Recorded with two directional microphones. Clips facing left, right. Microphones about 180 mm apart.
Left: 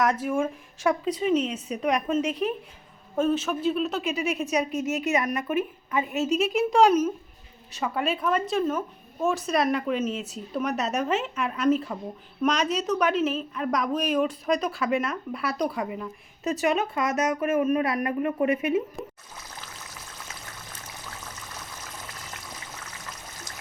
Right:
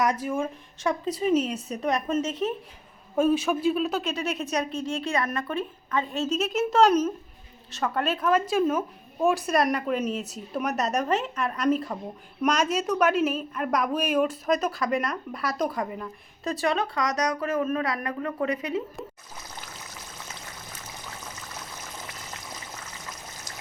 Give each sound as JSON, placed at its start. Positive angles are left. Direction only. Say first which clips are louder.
{"t": 0.0, "sound": "speech", "louder": "left 1 dB", "side_deg": 0}
{"t": 1.6, "sound": "speech", "louder": "left 1 dB", "side_deg": 10}
{"t": 2.0, "sound": "a woman's voice", "louder": "left 1 dB", "side_deg": 0}
{"t": 5.0, "sound": "a woman's voice", "louder": "left 2 dB", "side_deg": 20}
{"t": 16.4, "sound": "speech", "louder": "left 2 dB", "side_deg": 20}
{"t": 19.0, "sound": "speech", "louder": "left 2 dB", "side_deg": 0}